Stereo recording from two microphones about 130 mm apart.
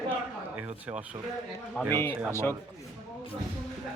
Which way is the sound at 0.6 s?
10° right (ahead or behind).